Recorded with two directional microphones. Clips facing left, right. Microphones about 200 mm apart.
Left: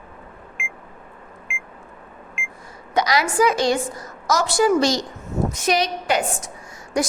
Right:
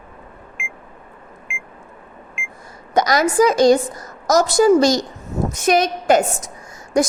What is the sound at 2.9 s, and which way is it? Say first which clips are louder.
A woman's voice: right 4 dB; 45° right (ahead or behind).